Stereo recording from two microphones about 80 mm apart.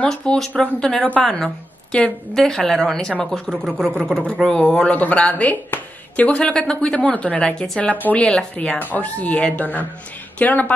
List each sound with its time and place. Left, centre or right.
0.0 s a woman's voice: centre
4.6 s a woman's voice: centre